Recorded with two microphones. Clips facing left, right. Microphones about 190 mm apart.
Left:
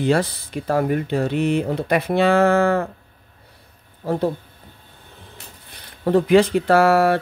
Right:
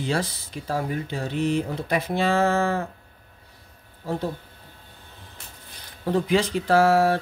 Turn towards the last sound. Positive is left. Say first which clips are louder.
# left 3 dB
turn(degrees=65)  # may be behind; listen again after turning